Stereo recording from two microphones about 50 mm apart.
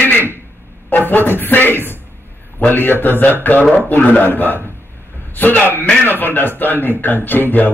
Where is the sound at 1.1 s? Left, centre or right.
Left.